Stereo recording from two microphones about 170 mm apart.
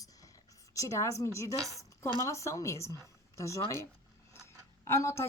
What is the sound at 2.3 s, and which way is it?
Speech, 15° left (ahead or behind).